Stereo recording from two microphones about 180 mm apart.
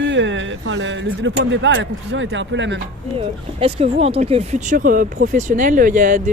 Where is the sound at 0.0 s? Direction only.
85° right.